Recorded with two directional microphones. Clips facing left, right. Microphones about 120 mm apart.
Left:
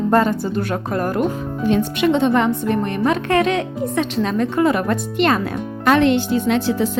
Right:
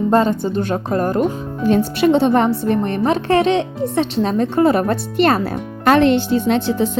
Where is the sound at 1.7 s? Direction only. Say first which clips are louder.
Right 3 dB; 40° right (ahead or behind).